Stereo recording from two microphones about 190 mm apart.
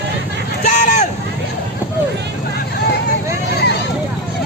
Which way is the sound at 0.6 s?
35° left (ahead or behind).